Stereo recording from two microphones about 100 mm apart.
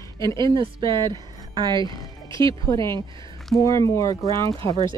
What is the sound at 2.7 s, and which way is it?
Speech, 30° left (ahead or behind).